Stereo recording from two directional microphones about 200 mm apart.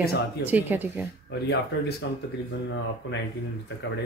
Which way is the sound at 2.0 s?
60° left (ahead or behind).